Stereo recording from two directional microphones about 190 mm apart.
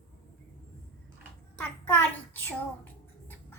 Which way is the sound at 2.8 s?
10° left (ahead or behind).